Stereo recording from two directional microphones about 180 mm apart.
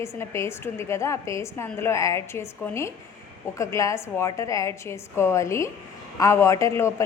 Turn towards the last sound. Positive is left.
turn(degrees=15)  # may be behind; listen again after turning